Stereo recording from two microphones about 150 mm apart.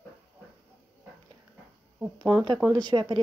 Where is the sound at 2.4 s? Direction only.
30° right (ahead or behind).